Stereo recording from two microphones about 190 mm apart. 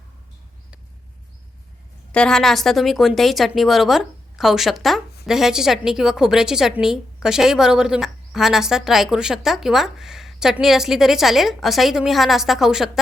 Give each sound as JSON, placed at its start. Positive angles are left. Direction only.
{"t": 2.1, "sound": "a woman's voice", "side_deg": 5}